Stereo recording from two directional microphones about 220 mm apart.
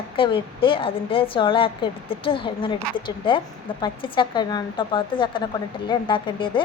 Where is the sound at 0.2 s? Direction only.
25° left (ahead or behind).